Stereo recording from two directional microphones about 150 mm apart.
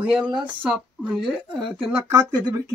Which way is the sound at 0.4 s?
10° right (ahead or behind).